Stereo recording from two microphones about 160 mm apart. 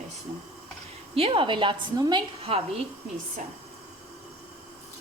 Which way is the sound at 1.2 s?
35° right (ahead or behind).